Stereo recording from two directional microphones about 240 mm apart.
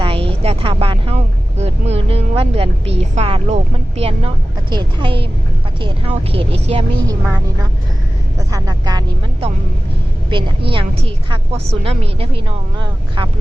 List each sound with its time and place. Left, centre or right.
0.0 s vehicle: right
4.7 s speech: centre
7.1 s speech: centre